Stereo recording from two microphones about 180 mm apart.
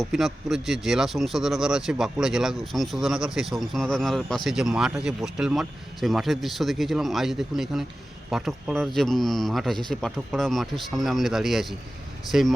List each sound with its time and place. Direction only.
0.0 s speech: centre (ahead or behind)